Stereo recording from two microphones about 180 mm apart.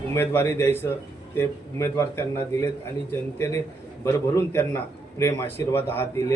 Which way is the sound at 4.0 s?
15° left (ahead or behind).